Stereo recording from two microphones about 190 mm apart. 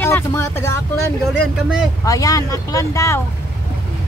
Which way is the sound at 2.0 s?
20° left (ahead or behind).